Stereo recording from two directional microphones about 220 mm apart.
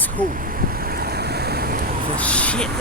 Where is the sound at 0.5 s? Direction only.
45° right (ahead or behind).